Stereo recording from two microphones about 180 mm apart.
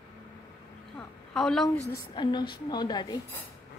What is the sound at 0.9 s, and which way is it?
Speech, centre (ahead or behind).